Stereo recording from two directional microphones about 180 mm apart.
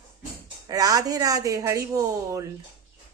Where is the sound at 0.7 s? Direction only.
20° right (ahead or behind).